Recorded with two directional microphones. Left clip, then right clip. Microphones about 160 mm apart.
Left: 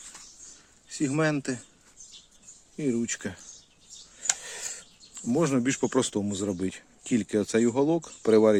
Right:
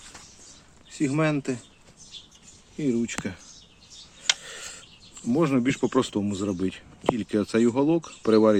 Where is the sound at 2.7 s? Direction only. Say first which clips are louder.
Right 2 dB; 40° left (ahead or behind).